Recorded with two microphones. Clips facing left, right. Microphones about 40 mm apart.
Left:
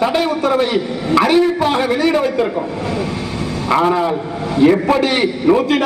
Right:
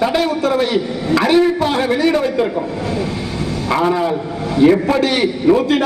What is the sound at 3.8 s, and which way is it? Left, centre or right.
Speech, centre.